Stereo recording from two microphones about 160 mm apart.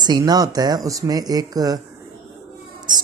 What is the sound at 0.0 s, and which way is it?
Speech, 25° right (ahead or behind).